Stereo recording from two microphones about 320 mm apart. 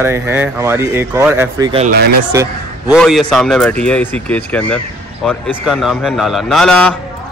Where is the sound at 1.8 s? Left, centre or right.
Right.